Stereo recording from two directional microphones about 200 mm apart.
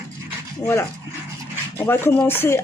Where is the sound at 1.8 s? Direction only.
10° left (ahead or behind).